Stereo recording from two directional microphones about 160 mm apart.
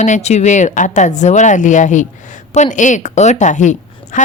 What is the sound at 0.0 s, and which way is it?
A woman's voice, 45° left (ahead or behind).